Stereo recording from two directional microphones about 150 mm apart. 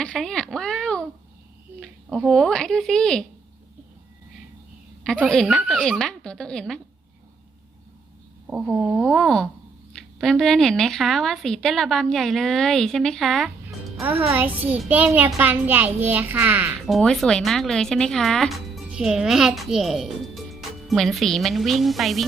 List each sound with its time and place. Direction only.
0.0 s a sound: 5° left (ahead or behind)
1.8 s a woman's voice: centre (ahead or behind)
5.0 s a woman's voice: 5° left (ahead or behind)
8.4 s a woman's voice: 10° right (ahead or behind)
14.0 s a child's voice: 10° right (ahead or behind)
16.8 s a woman's voice: 5° left (ahead or behind)